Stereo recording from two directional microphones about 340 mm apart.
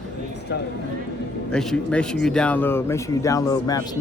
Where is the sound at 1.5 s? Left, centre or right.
Centre.